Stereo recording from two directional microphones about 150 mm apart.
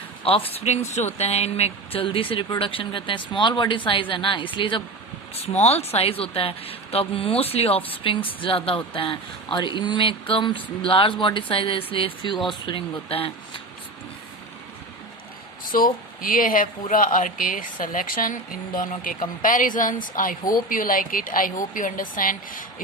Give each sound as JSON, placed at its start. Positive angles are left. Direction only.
{"t": 0.3, "sound": "speech", "side_deg": 40}
{"t": 15.6, "sound": "speech", "side_deg": 70}